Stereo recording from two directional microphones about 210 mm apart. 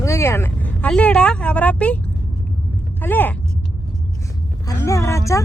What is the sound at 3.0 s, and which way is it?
Speech, 10° left (ahead or behind).